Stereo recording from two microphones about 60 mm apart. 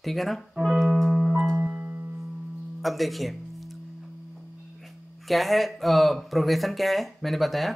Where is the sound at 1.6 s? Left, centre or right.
Right.